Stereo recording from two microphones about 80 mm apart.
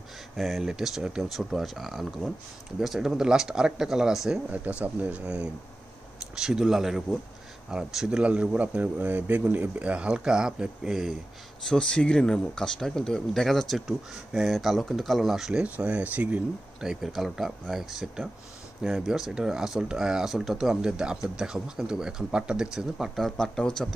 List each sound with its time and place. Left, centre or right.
0.4 s speech: centre
4.5 s speech: centre
11.6 s speech: centre
15.6 s speech: centre
16.8 s speech: centre